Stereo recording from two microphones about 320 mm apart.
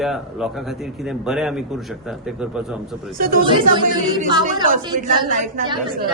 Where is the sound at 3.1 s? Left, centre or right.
Right.